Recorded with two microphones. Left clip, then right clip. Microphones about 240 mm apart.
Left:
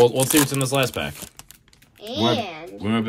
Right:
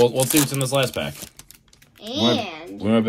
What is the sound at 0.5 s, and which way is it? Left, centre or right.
Speech, centre.